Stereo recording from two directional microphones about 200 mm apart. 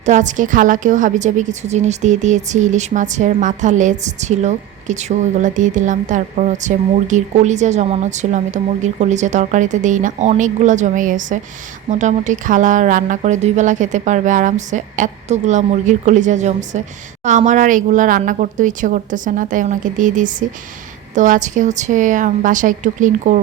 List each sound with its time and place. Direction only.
0.0 s a woman's voice: 40° right (ahead or behind)